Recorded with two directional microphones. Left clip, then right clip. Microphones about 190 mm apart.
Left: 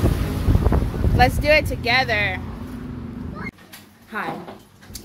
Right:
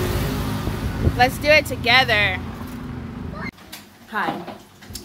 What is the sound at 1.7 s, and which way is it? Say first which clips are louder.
Speech: right 3 dB; 5° left (ahead or behind).